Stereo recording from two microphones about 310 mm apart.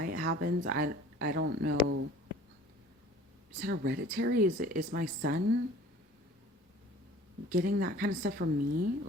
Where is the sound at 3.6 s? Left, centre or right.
Right.